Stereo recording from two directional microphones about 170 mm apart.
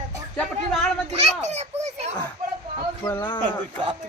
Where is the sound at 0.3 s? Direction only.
5° left (ahead or behind).